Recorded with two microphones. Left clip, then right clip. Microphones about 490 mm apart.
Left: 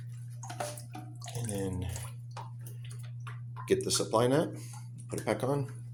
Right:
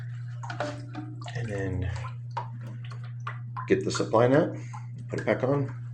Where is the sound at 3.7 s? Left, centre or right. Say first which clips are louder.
Right 4 dB; left.